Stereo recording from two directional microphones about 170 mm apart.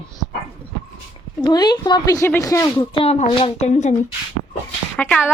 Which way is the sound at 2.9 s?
35° left (ahead or behind).